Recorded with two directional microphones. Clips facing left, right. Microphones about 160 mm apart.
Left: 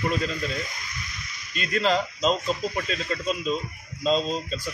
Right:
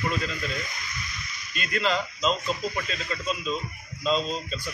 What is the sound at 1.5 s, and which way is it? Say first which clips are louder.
A man's voice: left 3 dB; 35° left (ahead or behind).